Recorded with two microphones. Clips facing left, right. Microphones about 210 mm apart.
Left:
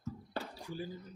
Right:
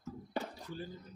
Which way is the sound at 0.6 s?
10° left (ahead or behind).